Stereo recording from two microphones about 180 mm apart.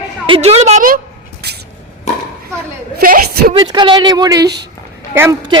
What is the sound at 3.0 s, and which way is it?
Speech, 55° right (ahead or behind).